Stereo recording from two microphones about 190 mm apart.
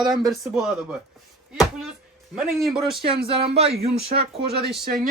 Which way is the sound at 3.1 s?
30° right (ahead or behind).